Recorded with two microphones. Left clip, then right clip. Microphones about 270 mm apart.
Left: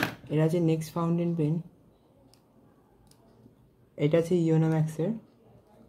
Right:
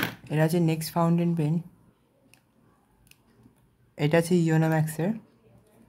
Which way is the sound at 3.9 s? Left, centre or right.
Right.